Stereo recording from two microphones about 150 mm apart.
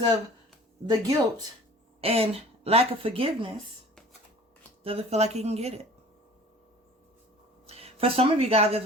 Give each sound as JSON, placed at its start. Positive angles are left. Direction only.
{"t": 0.9, "sound": "speech", "side_deg": -25}
{"t": 2.0, "sound": "speech", "side_deg": -40}
{"t": 4.8, "sound": "speech", "side_deg": -40}
{"t": 7.7, "sound": "speech", "side_deg": -40}